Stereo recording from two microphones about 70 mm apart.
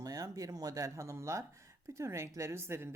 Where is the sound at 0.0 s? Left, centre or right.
Right.